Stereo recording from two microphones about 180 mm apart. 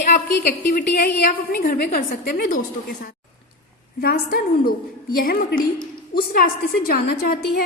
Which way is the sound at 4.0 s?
60° left (ahead or behind).